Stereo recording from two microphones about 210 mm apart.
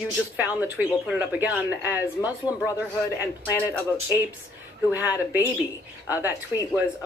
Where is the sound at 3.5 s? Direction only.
10° left (ahead or behind).